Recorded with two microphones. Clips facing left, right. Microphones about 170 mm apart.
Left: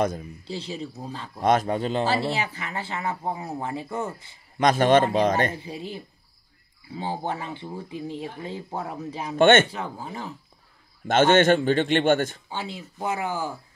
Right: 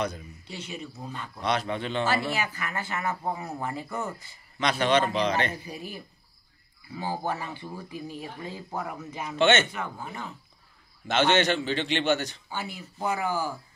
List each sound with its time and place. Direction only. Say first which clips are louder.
0.5 s speech: left 5 dB; 30° left (ahead or behind)
1.4 s speech: left 7 dB; 45° left (ahead or behind); by 4.1 s 25° left (ahead or behind)
4.6 s a man's voice: left 6 dB; 45° left (ahead or behind)
5.5 s speech: left 3 dB; 25° left (ahead or behind)
9.4 s a man's voice: left 6 dB; 50° left (ahead or behind)
9.7 s speech: left 2 dB; 30° left (ahead or behind)
11.1 s a man's voice: left 6 dB; 50° left (ahead or behind)
12.4 s speech: left 2 dB; 25° left (ahead or behind)